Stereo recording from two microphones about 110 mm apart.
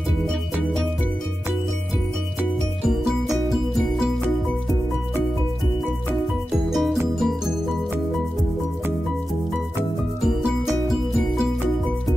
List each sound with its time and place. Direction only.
0.3 s music: 5° left (ahead or behind)
2.8 s music: centre (ahead or behind)
6.7 s music: centre (ahead or behind)
10.2 s music: centre (ahead or behind)